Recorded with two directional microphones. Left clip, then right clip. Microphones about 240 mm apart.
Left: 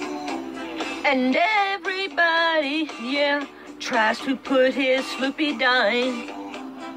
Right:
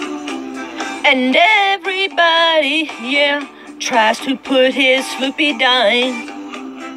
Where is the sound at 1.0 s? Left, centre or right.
Centre.